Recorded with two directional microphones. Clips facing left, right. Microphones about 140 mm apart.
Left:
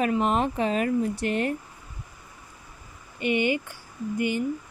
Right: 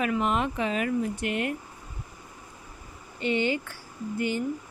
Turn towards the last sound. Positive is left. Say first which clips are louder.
# left 2 dB
turn(degrees=15)  # may be behind; listen again after turning